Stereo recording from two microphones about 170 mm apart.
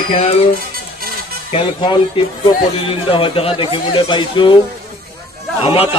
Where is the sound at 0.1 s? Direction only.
35° left (ahead or behind).